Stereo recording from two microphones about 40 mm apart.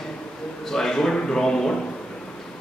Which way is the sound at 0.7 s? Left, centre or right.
Centre.